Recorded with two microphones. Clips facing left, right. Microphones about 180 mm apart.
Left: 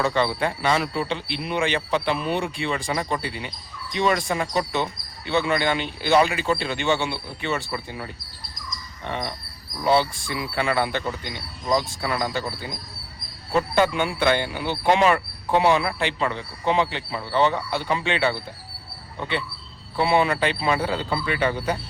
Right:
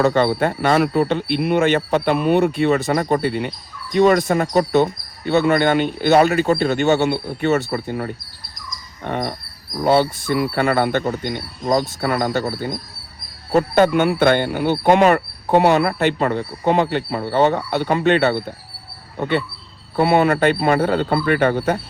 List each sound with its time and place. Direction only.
0.0 s speech: 45° right (ahead or behind)
11.3 s speech: 55° right (ahead or behind)
13.5 s speech: 45° right (ahead or behind)